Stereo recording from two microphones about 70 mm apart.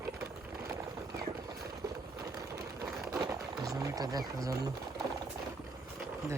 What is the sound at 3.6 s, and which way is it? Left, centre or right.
Wild animals, right.